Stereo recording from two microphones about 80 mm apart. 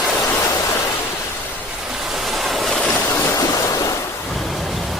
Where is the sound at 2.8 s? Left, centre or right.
Centre.